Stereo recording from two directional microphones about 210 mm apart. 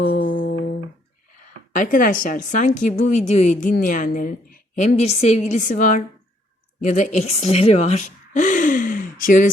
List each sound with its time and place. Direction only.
0.0 s music: 45° left (ahead or behind)
1.7 s a woman's voice: 40° left (ahead or behind)